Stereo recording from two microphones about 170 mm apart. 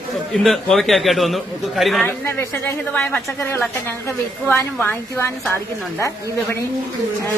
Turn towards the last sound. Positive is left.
turn(degrees=15)  # may be behind; listen again after turning